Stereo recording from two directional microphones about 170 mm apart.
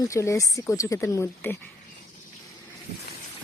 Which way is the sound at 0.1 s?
20° left (ahead or behind).